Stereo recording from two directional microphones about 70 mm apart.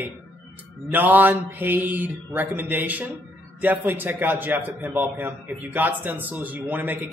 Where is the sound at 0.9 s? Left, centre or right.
Right.